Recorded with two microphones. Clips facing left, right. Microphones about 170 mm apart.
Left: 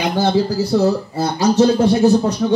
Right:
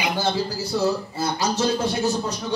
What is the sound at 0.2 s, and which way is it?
Speech, 60° left (ahead or behind).